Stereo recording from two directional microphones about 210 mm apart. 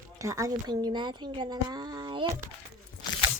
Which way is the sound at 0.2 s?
15° right (ahead or behind).